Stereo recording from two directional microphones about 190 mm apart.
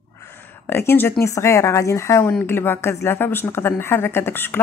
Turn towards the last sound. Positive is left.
turn(degrees=10)  # may be behind; listen again after turning